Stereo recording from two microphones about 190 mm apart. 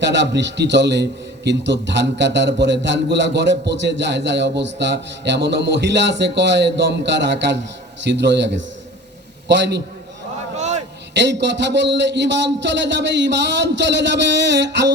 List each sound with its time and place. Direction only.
0.0 s a man's voice: 70° right (ahead or behind)
10.6 s a sound: 35° right (ahead or behind)
11.1 s a man's voice: 65° right (ahead or behind)